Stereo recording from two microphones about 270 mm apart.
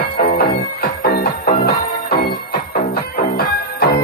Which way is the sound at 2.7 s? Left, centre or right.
Left.